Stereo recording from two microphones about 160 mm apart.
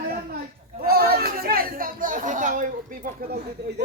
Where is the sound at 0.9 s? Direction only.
70° right (ahead or behind); by 2.7 s 55° right (ahead or behind).